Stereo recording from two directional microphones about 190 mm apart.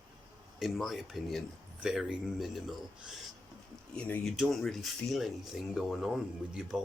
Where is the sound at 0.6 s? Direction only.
Centre (ahead or behind).